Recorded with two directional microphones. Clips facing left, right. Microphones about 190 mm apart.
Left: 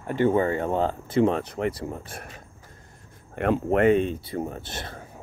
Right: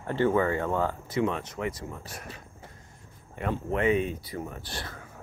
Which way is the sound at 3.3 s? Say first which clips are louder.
Left 7 dB; 65° left (ahead or behind).